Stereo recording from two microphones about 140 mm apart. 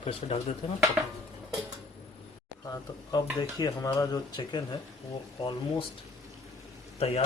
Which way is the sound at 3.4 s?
25° left (ahead or behind).